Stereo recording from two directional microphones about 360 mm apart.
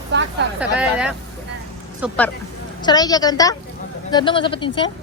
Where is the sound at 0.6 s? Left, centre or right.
Centre.